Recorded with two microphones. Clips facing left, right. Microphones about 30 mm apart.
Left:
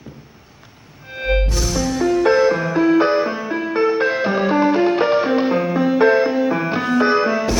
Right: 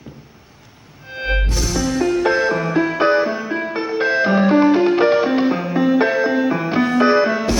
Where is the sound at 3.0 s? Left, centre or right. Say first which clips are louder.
Right 1 dB; right.